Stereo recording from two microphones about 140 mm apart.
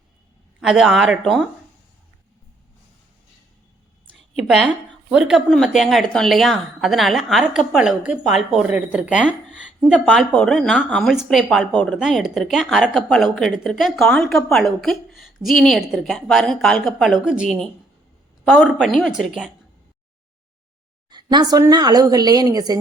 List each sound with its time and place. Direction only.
0.6 s a woman's voice: 5° right (ahead or behind)
4.4 s a woman's voice: centre (ahead or behind)
18.5 s a woman's voice: 5° right (ahead or behind)
21.1 s a woman's voice: 30° right (ahead or behind)